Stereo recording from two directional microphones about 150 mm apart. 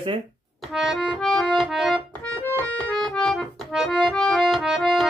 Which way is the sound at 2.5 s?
10° left (ahead or behind).